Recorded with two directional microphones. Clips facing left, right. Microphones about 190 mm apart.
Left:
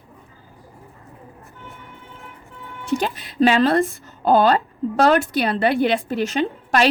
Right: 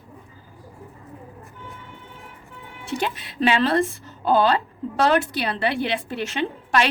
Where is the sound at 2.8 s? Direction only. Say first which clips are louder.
Left 4 dB; 40° left (ahead or behind).